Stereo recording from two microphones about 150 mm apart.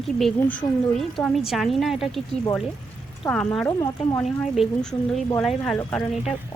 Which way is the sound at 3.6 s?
20° left (ahead or behind).